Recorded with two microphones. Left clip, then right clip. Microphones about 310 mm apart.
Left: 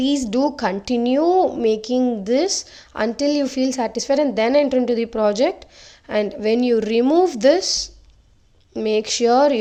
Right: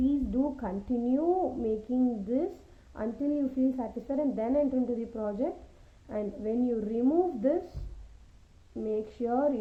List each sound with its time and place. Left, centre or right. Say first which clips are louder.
0.0 s a woman's voice: left 10 dB; left
8.7 s a woman's voice: left 13 dB; left